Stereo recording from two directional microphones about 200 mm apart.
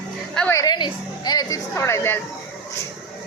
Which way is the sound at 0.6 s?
20° left (ahead or behind).